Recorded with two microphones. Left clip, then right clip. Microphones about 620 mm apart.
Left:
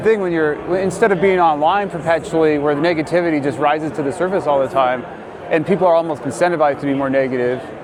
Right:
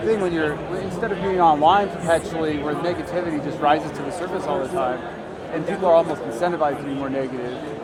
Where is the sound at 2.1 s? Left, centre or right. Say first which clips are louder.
Left 8 dB; left.